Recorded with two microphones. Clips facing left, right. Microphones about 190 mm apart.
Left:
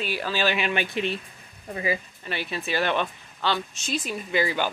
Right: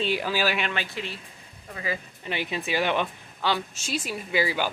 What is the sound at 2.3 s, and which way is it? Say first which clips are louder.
A woman's voice: right 1 dB; 15° right (ahead or behind).